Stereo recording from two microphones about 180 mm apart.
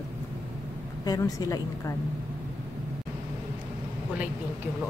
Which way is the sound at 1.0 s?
20° left (ahead or behind).